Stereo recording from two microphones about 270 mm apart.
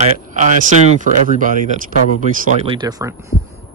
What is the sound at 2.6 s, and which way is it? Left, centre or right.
Speech, centre.